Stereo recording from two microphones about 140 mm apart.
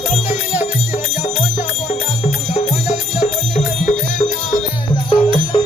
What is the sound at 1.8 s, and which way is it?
Music, 50° left (ahead or behind).